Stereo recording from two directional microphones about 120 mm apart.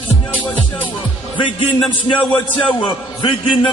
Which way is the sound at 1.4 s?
45° left (ahead or behind).